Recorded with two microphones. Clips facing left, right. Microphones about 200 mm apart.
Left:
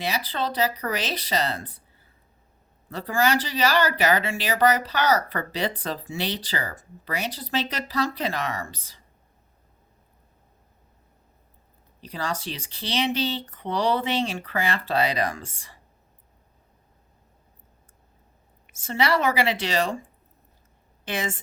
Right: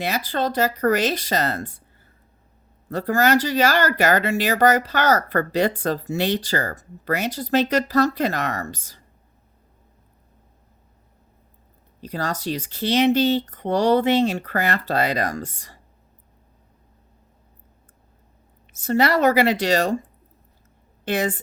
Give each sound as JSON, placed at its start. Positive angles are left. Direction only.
{"t": 0.0, "sound": "speech", "side_deg": -45}
{"t": 2.9, "sound": "speech", "side_deg": -45}
{"t": 11.9, "sound": "speech", "side_deg": -45}
{"t": 18.8, "sound": "a woman's voice", "side_deg": -40}